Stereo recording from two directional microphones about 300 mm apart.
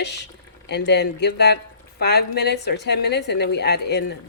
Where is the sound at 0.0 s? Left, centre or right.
Left.